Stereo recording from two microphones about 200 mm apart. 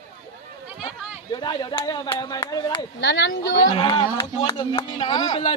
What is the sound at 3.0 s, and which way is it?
Speech, 60° left (ahead or behind).